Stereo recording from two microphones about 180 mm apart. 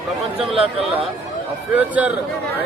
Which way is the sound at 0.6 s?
30° right (ahead or behind).